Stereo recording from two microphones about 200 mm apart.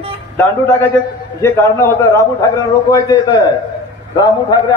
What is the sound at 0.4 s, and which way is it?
A man's voice, 10° left (ahead or behind).